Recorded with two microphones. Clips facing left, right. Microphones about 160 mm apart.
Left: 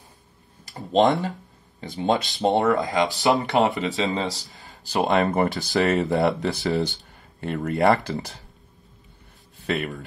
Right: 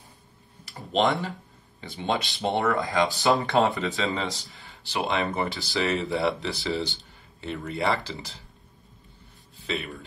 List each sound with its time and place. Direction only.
0.9 s speech: 20° left (ahead or behind)
1.8 s speech: 40° left (ahead or behind)
2.6 s speech: 20° left (ahead or behind)
4.6 s speech: 40° left (ahead or behind)
9.7 s speech: 55° left (ahead or behind)